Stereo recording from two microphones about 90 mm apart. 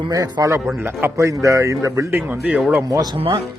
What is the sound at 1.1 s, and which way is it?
Speech, 35° right (ahead or behind).